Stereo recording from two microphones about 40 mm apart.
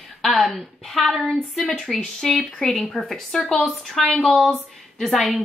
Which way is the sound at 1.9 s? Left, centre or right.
Centre.